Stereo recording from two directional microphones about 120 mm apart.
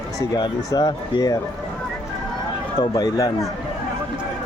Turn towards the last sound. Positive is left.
turn(degrees=30)  # may be behind; listen again after turning